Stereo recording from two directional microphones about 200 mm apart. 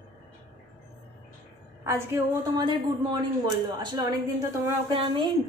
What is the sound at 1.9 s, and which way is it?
Speech, 15° right (ahead or behind).